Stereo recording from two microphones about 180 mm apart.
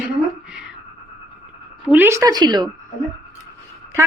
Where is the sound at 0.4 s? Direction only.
5° right (ahead or behind).